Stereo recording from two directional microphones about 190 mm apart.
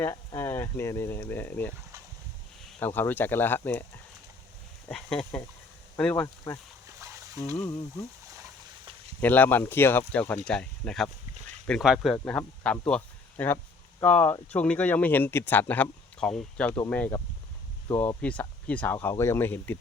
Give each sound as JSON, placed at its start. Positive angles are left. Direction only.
{"t": 0.0, "sound": "speech", "side_deg": 15}
{"t": 2.8, "sound": "speech", "side_deg": 10}
{"t": 4.9, "sound": "speech", "side_deg": 5}
{"t": 6.2, "sound": "speech", "side_deg": 20}
{"t": 6.8, "sound": "splash", "side_deg": -15}
{"t": 9.2, "sound": "speech", "side_deg": 10}